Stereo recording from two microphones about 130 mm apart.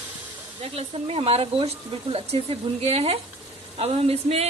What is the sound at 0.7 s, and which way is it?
A woman's voice, 50° right (ahead or behind).